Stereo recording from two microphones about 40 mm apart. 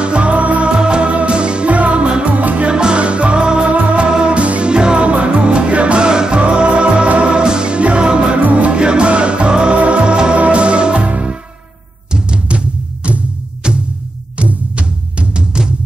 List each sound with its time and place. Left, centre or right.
0.0 s music: right
2.2 s music: right
2.7 s music: right
8.4 s music: right
8.7 s music: right